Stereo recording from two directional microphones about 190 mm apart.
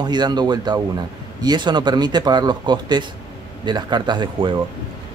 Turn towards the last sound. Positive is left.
turn(degrees=-25)  # may be behind; listen again after turning